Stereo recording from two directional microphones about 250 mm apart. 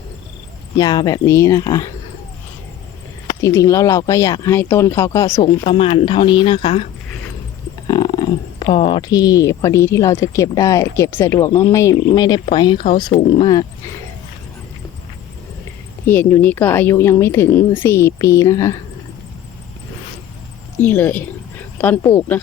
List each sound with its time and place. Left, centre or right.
0.8 s speech: centre
3.2 s speech: centre
7.9 s speech: centre
16.0 s speech: centre
20.7 s speech: centre